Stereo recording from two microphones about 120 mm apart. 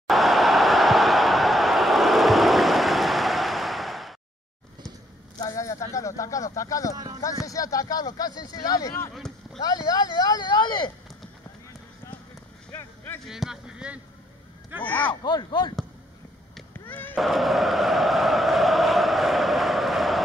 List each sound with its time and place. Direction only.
0.0 s a sound: centre (ahead or behind)
5.4 s speech: 30° left (ahead or behind)
9.1 s a sound: centre (ahead or behind)
9.6 s speech: 35° left (ahead or behind)
12.7 s vehicle: 20° left (ahead or behind)
13.2 s speech: 5° right (ahead or behind)
14.8 s speech: 15° left (ahead or behind)
15.2 s speech: 35° left (ahead or behind)
16.8 s speech: 15° left (ahead or behind)
17.2 s a sound: centre (ahead or behind)